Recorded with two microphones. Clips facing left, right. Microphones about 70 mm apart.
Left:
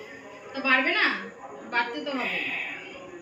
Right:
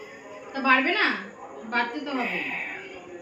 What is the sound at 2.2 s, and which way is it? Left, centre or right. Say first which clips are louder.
Speech: right 2 dB; right.